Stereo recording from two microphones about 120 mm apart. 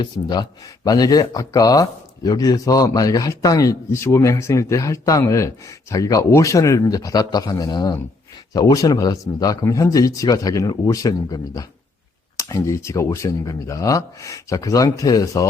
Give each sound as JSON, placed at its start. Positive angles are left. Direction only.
{"t": 0.0, "sound": "speech", "side_deg": 35}